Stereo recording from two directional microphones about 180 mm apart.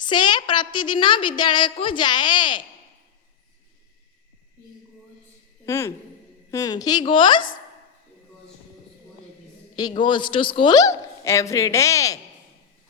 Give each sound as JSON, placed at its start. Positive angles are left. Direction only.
{"t": 0.0, "sound": "a woman's voice", "side_deg": 25}
{"t": 5.6, "sound": "a woman's voice", "side_deg": 15}
{"t": 9.7, "sound": "a woman's voice", "side_deg": 25}